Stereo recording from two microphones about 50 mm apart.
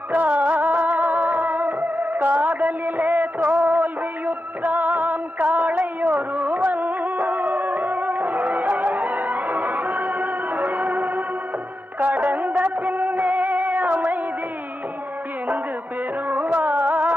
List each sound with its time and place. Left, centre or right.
0.1 s music: right
12.2 s music: right
16.3 s music: right